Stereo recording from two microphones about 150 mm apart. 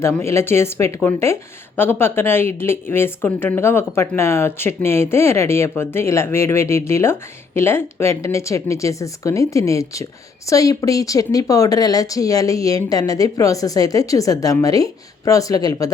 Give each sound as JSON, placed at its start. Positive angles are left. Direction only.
{"t": 0.0, "sound": "speech", "side_deg": 20}